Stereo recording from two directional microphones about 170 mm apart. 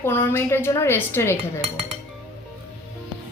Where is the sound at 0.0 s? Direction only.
15° left (ahead or behind).